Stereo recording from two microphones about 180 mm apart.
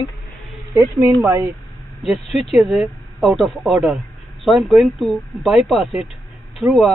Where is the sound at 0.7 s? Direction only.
20° right (ahead or behind).